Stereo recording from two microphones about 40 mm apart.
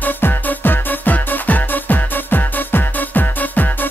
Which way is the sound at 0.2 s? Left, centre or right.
Left.